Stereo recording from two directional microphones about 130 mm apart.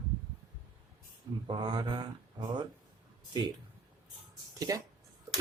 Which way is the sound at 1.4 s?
40° right (ahead or behind).